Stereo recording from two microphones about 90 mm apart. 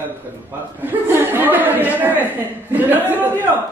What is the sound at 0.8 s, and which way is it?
Speech, 20° right (ahead or behind).